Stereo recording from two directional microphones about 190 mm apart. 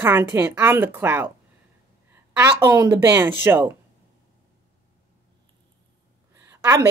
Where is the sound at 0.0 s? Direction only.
10° right (ahead or behind).